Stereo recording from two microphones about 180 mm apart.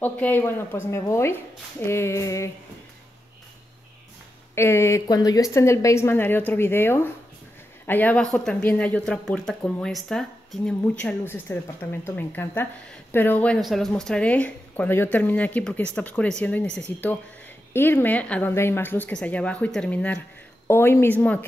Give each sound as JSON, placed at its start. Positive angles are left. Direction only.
{"t": 0.0, "sound": "speech", "side_deg": 10}
{"t": 4.6, "sound": "speech", "side_deg": 15}